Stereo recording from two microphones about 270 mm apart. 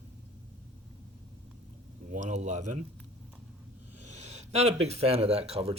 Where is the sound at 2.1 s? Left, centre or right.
Right.